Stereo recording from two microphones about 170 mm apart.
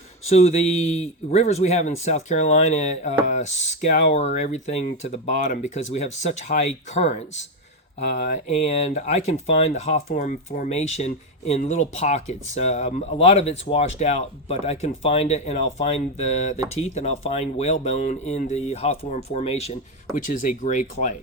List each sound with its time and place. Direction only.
0.3 s speech: 40° left (ahead or behind)